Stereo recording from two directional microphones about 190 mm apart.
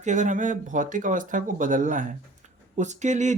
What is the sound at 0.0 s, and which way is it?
Speech, 40° right (ahead or behind).